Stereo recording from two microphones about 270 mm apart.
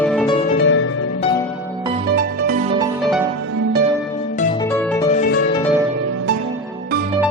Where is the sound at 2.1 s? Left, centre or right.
Right.